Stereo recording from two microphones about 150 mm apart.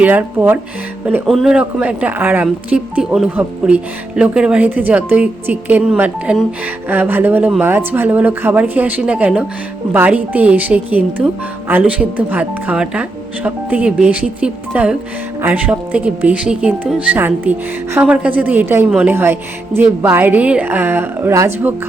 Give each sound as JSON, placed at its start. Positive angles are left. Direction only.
{"t": 0.0, "sound": "speech", "side_deg": -10}